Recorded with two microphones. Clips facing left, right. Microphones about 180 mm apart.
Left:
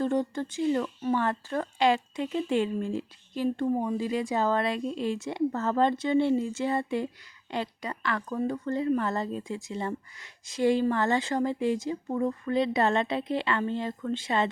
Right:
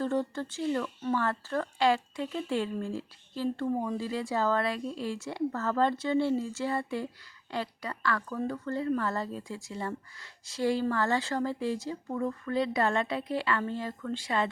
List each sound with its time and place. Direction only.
0.0 s speech: 15° left (ahead or behind)